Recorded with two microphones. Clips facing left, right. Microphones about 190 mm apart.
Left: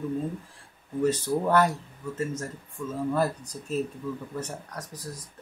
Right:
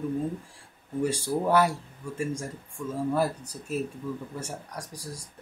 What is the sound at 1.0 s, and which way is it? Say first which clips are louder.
Speech: left 2 dB; 10° right (ahead or behind).